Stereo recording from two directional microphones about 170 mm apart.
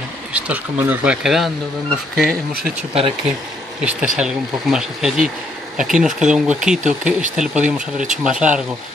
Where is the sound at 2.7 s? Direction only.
35° right (ahead or behind).